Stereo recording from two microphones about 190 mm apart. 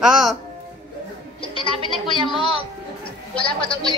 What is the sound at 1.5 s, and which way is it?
Speech, 25° right (ahead or behind).